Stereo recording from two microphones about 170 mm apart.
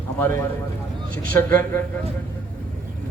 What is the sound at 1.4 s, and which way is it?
Speech, 15° left (ahead or behind).